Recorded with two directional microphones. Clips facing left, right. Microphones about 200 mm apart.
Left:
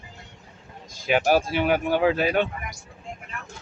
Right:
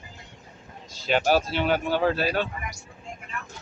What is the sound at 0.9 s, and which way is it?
Speech, 10° left (ahead or behind).